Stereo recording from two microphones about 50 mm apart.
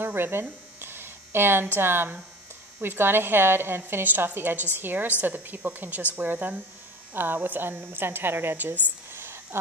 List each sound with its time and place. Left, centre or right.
0.0 s a woman's voice: right
4.1 s a woman's voice: right